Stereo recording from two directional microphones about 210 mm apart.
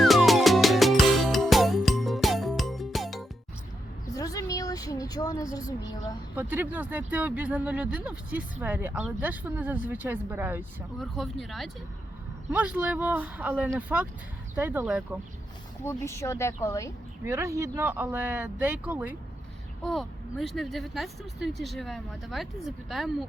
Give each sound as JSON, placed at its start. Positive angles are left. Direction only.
{"t": 0.0, "sound": "music", "side_deg": 0}
{"t": 4.1, "sound": "a sound", "side_deg": 15}
{"t": 6.3, "sound": "speech", "side_deg": -10}
{"t": 15.8, "sound": "speech", "side_deg": 10}
{"t": 17.2, "sound": "speech", "side_deg": -15}